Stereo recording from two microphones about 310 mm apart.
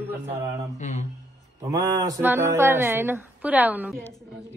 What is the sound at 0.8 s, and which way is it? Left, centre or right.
Speech, left.